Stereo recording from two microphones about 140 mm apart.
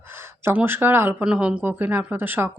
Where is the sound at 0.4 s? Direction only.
15° right (ahead or behind).